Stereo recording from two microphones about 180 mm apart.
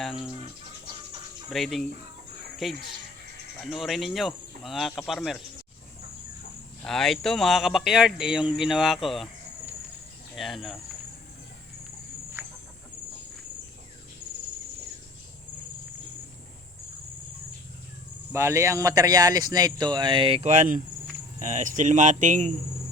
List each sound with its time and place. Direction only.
0.0 s speech: centre (ahead or behind)
1.5 s speech: centre (ahead or behind)
6.8 s speech: centre (ahead or behind)
10.3 s speech: centre (ahead or behind)
12.4 s chicken: 15° right (ahead or behind)
18.3 s speech: 15° right (ahead or behind); by 22.5 s 40° right (ahead or behind)